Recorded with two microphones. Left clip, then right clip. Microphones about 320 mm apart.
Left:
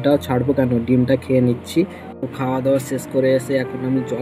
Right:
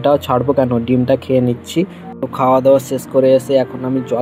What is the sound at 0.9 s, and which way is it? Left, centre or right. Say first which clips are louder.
Speech: right 2 dB; right.